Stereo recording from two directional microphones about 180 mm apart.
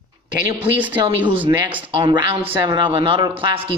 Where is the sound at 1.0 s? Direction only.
25° right (ahead or behind).